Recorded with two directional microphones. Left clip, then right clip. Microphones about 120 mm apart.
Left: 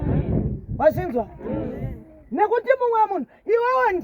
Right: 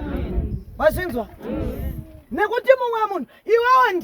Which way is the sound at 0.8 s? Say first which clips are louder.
Even; 45° right (ahead or behind).